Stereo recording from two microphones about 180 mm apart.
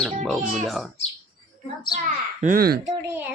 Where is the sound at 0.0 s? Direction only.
Centre (ahead or behind).